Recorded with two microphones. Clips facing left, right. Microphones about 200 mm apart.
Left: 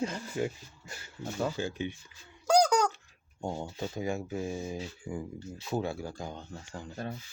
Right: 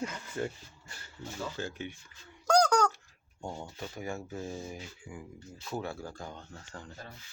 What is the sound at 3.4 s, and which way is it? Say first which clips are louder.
Speech: left 5 dB; 20° left (ahead or behind).